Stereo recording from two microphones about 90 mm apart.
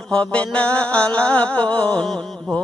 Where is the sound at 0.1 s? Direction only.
10° left (ahead or behind).